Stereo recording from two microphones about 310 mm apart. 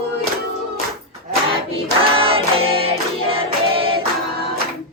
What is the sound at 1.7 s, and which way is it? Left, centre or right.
Choir, centre.